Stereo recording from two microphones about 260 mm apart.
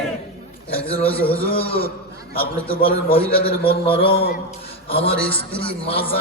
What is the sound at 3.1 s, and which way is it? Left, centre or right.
A man's voice, left.